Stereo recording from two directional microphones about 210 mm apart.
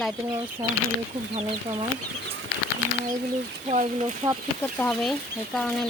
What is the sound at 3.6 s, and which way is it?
Speech, 35° right (ahead or behind).